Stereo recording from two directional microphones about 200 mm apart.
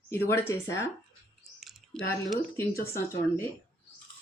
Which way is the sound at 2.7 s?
50° left (ahead or behind).